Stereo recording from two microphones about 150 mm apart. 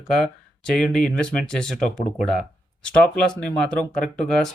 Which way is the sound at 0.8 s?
5° left (ahead or behind).